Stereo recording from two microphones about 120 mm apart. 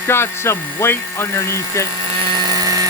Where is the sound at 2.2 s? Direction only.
40° right (ahead or behind).